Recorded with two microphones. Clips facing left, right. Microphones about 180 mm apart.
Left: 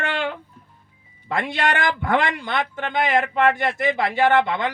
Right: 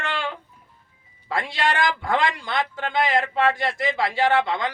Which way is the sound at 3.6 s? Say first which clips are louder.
Left 2 dB; 60° left (ahead or behind).